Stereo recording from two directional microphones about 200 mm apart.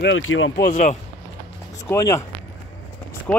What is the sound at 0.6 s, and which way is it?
Speech, 35° left (ahead or behind).